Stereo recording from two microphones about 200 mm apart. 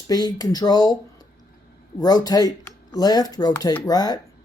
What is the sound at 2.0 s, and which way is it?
Speech, 20° left (ahead or behind).